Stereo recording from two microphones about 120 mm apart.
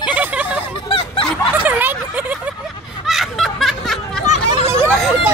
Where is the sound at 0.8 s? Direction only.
50° left (ahead or behind).